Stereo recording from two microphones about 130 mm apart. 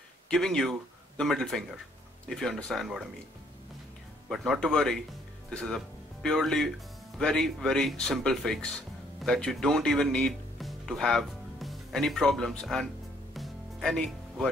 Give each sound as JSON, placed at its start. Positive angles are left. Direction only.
{"t": 0.3, "sound": "speech", "side_deg": 5}
{"t": 4.3, "sound": "speech", "side_deg": 0}
{"t": 13.3, "sound": "music", "side_deg": 0}